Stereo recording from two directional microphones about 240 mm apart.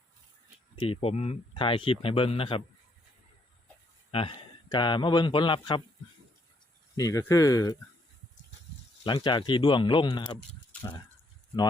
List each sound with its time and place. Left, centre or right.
0.8 s speech: left
4.1 s speech: left
6.9 s speech: centre
9.0 s speech: centre